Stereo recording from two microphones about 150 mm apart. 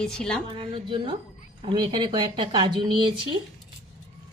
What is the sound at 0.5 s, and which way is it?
Speech, 35° right (ahead or behind).